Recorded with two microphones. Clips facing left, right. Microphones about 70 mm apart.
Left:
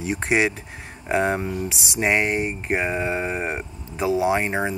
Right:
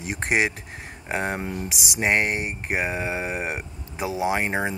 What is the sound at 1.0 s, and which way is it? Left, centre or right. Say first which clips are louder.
Speech: left 6 dB; centre.